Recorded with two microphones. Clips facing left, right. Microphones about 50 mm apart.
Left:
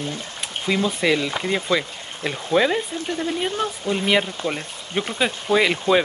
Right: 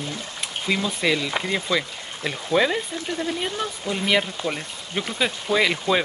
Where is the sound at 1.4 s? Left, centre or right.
Right.